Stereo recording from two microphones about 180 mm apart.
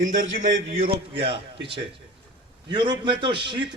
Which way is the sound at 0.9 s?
30° right (ahead or behind).